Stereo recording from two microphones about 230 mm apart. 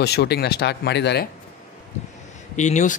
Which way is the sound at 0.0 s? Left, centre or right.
Left.